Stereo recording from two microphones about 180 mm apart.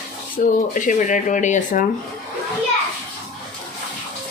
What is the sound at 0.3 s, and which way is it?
Speech, 50° left (ahead or behind).